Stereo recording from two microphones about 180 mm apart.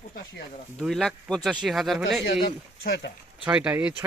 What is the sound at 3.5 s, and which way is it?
Speech, 5° right (ahead or behind).